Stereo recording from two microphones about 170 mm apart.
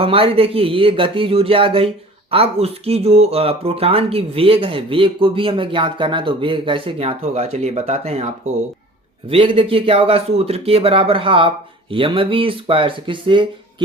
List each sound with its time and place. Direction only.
0.0 s speech: 35° right (ahead or behind)
9.3 s speech: 30° right (ahead or behind)